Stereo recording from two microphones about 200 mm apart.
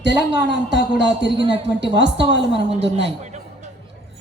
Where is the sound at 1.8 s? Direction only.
60° right (ahead or behind).